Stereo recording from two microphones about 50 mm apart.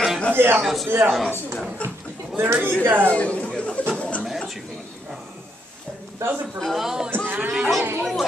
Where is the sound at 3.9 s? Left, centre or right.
Left.